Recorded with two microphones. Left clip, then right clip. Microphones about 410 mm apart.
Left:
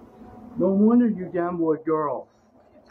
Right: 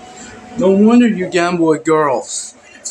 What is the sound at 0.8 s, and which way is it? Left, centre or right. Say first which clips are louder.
Speech: right 9 dB; left.